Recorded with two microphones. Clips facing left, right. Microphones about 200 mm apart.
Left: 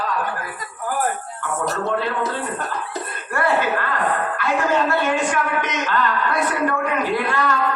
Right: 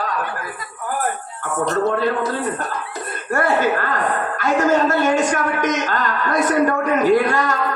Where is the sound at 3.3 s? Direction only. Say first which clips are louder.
Right 3 dB; 45° right (ahead or behind).